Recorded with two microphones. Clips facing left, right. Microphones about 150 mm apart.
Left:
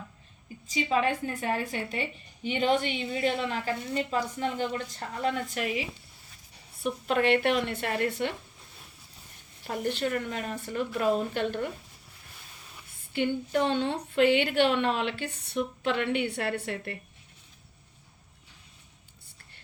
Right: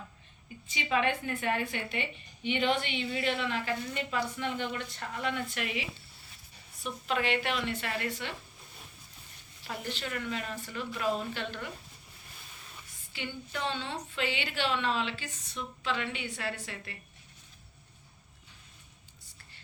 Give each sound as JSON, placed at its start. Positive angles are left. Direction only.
{"t": 0.7, "sound": "a woman's voice", "side_deg": 35}
{"t": 6.8, "sound": "a woman's voice", "side_deg": 55}
{"t": 9.6, "sound": "a woman's voice", "side_deg": 50}
{"t": 13.1, "sound": "a woman's voice", "side_deg": 50}